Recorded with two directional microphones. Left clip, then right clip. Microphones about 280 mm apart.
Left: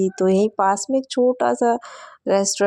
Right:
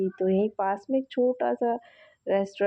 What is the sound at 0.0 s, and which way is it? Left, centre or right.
Speech, left.